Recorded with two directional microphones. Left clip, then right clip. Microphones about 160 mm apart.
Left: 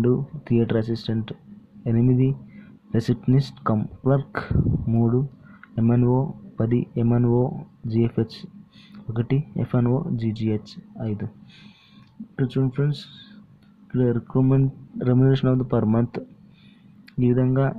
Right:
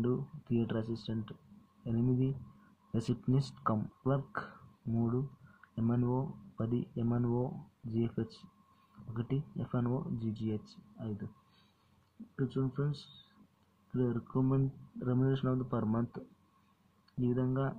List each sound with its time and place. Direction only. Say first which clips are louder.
0.0 s speech: left 13 dB; 25° left (ahead or behind)
12.4 s speech: left 11 dB; 30° left (ahead or behind)
17.2 s speech: left 13 dB; 25° left (ahead or behind)